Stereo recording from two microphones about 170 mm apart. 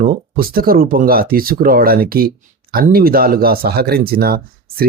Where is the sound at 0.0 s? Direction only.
55° right (ahead or behind).